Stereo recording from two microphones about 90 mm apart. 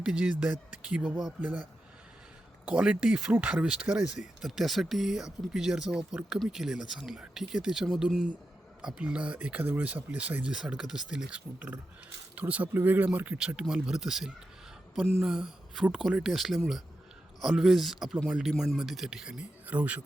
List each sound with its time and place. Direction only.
0.0 s speech: 10° right (ahead or behind)
2.6 s speech: 15° right (ahead or behind)
4.4 s speech: centre (ahead or behind); by 20.0 s 15° right (ahead or behind)